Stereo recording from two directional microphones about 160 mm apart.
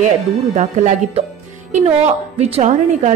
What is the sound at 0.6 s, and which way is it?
A woman's voice, 50° right (ahead or behind).